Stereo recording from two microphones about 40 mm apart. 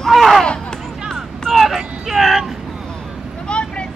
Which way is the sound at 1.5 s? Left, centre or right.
Centre.